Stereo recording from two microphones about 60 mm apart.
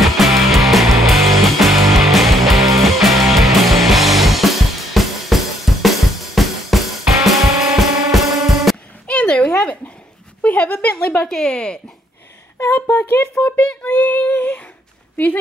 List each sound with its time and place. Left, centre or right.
0.0 s music: centre
9.0 s a sound: centre
12.7 s female singing: left